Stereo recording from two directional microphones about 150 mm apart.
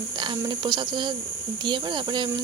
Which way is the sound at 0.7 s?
30° right (ahead or behind).